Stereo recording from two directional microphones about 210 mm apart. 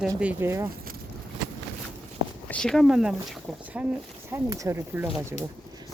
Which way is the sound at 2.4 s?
5° left (ahead or behind).